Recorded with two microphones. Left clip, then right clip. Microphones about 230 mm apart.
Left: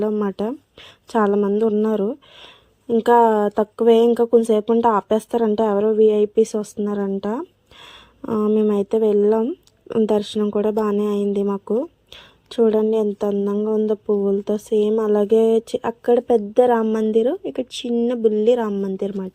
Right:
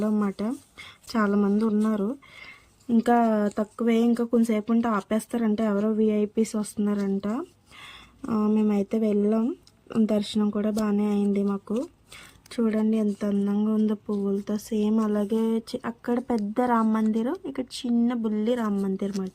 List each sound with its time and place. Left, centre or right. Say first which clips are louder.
0.0 s speech: left 7 dB; centre